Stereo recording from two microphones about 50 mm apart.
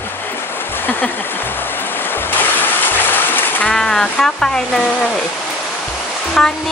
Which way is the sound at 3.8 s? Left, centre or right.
Centre.